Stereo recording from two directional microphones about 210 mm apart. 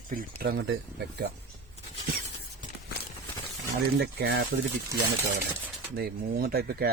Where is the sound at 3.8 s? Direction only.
50° right (ahead or behind).